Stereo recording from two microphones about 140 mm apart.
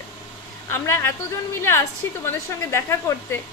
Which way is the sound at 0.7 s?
15° left (ahead or behind).